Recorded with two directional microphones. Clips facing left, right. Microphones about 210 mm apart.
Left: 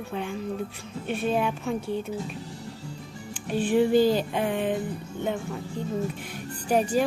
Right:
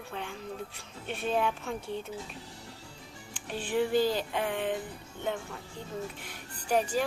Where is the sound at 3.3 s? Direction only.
15° left (ahead or behind).